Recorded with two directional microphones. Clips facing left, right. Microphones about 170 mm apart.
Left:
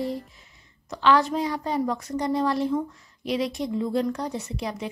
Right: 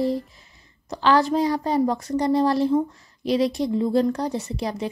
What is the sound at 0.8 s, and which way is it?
Music, 35° right (ahead or behind).